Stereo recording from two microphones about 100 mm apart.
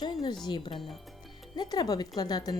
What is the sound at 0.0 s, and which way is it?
Speech, 45° left (ahead or behind).